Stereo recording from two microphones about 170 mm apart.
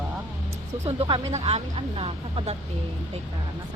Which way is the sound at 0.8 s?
35° right (ahead or behind).